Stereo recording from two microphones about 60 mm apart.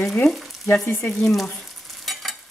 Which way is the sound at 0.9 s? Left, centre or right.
Left.